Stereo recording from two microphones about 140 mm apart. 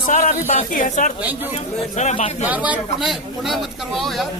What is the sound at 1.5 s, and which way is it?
Speech, 50° left (ahead or behind).